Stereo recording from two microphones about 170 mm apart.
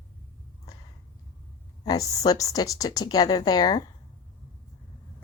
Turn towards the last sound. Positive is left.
turn(degrees=25)  # may be behind; listen again after turning